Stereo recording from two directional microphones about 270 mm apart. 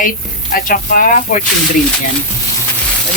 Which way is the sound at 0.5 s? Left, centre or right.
Left.